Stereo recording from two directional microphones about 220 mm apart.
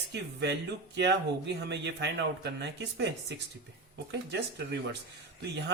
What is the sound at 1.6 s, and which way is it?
Speech, 55° right (ahead or behind).